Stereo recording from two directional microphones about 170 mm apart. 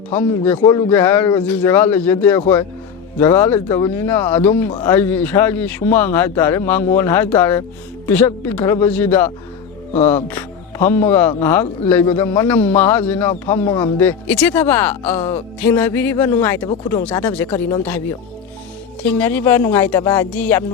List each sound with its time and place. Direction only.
0.1 s speech: 10° left (ahead or behind)
0.6 s speech: 25° left (ahead or behind)
0.9 s speech: 10° left (ahead or behind)
4.7 s speech: 25° left (ahead or behind)
4.9 s speech: 10° left (ahead or behind)